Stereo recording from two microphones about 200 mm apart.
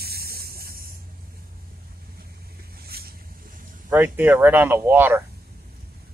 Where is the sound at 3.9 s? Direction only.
10° right (ahead or behind).